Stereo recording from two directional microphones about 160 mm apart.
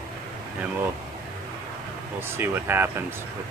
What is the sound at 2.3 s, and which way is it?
Speech, 15° right (ahead or behind).